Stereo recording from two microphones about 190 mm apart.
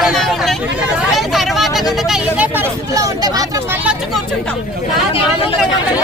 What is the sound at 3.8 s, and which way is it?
Speech, 5° right (ahead or behind).